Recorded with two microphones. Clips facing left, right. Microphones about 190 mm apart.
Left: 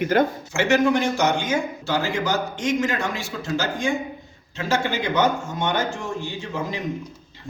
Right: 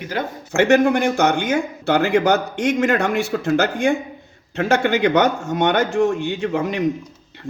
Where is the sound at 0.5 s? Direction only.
55° right (ahead or behind).